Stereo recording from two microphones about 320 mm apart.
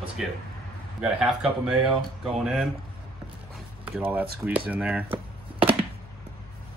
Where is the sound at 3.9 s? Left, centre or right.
Centre.